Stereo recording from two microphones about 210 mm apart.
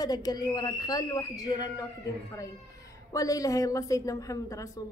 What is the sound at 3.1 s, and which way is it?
A woman's voice, 15° left (ahead or behind).